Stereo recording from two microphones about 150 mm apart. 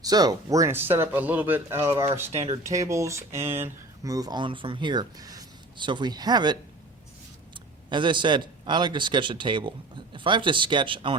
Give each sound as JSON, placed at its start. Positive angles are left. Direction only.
{"t": 0.0, "sound": "speech", "side_deg": -25}
{"t": 2.3, "sound": "speech", "side_deg": -45}
{"t": 2.6, "sound": "speech", "side_deg": -20}